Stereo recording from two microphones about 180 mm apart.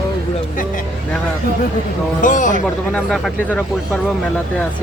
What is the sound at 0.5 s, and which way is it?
Vehicle, 50° left (ahead or behind).